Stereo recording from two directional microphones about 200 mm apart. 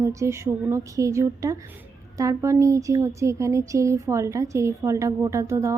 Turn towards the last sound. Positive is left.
turn(degrees=-15)  # may be behind; listen again after turning